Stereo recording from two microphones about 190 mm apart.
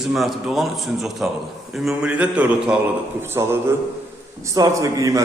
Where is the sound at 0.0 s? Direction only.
Centre (ahead or behind).